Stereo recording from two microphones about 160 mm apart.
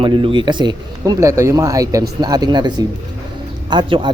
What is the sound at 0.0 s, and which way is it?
Speech, 30° right (ahead or behind).